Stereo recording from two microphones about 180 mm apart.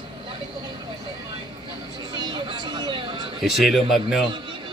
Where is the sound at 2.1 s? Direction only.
25° right (ahead or behind).